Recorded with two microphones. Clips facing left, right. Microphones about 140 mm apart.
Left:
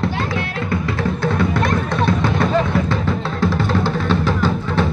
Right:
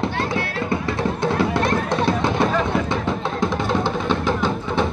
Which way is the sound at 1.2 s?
25° right (ahead or behind).